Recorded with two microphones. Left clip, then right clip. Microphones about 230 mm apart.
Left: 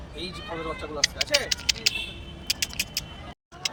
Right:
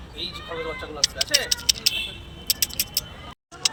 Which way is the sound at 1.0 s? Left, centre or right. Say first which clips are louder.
Right 2 dB; centre.